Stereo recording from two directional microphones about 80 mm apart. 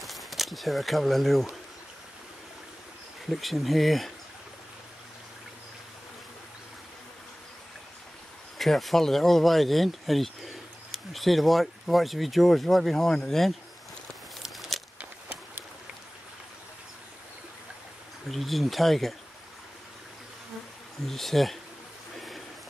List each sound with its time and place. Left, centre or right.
0.0 s speech: centre
3.3 s speech: centre
8.5 s speech: centre
14.4 s a sound: centre
15.0 s a sound: right
18.3 s speech: centre
21.0 s speech: centre